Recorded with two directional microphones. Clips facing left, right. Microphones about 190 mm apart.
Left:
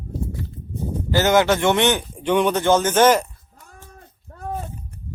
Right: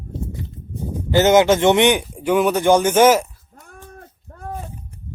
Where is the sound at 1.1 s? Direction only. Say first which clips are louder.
Right 4 dB; 20° right (ahead or behind).